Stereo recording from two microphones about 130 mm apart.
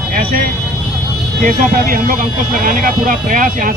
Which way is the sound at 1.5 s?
90° right.